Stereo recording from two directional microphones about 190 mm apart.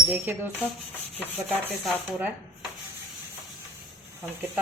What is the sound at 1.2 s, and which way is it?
Rub, 10° right (ahead or behind).